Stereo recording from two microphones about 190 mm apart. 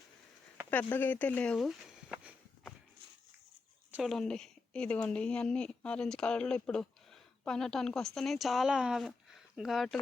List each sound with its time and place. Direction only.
0.7 s speech: 10° left (ahead or behind)
3.9 s a woman's voice: centre (ahead or behind)